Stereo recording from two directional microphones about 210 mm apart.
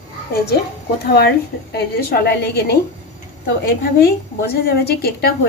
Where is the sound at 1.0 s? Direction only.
50° left (ahead or behind).